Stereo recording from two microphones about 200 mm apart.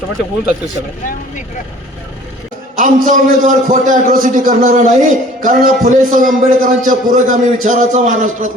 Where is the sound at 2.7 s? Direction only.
40° right (ahead or behind).